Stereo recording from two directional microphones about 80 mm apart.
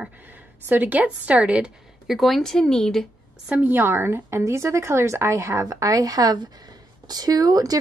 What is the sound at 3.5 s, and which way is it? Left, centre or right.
A woman's voice, right.